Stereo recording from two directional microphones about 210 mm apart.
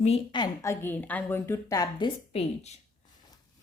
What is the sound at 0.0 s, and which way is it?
A woman's voice, 25° left (ahead or behind).